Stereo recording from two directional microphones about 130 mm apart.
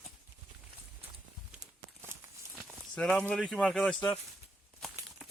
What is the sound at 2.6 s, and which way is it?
Speech, 5° left (ahead or behind).